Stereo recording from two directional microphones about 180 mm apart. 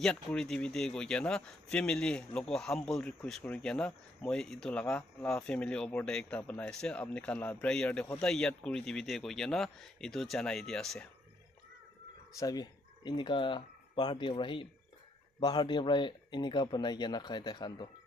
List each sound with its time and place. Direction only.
0.0 s speech: 5° left (ahead or behind)
12.4 s speech: 20° left (ahead or behind)